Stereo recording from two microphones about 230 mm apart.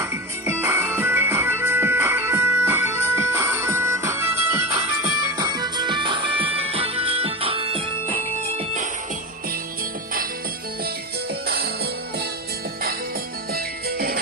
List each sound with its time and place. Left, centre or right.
0.0 s music: centre
11.4 s music: right
13.5 s music: right